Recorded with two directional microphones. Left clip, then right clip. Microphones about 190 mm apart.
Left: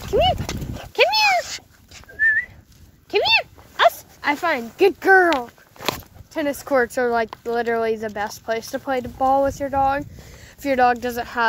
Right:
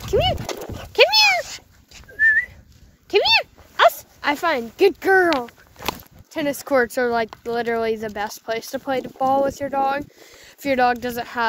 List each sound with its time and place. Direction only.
0.1 s speech: 45° right (ahead or behind)
0.9 s dog: 60° right (ahead or behind)
1.4 s cat: 45° left (ahead or behind)
2.1 s whistling: 55° right (ahead or behind)
3.1 s dog: 70° right (ahead or behind); by 4.6 s 55° right (ahead or behind)
5.1 s speech: 15° right (ahead or behind)
6.3 s speech: 30° right (ahead or behind)